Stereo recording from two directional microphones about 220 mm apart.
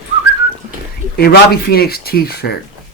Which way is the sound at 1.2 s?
45° left (ahead or behind).